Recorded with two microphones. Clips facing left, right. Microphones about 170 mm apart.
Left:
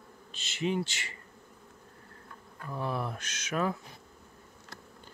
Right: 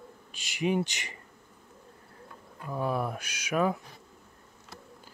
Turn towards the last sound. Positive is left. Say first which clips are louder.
# right 4 dB
turn(degrees=-10)  # may be behind; listen again after turning